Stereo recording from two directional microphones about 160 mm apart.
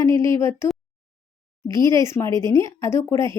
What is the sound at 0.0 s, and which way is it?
Speech, 20° left (ahead or behind).